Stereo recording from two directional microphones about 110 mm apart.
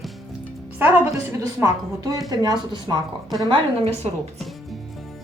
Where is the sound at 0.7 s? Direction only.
20° right (ahead or behind); by 3.0 s 35° right (ahead or behind).